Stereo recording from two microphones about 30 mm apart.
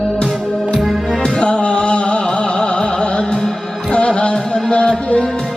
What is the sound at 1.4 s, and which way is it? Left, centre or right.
Music, left.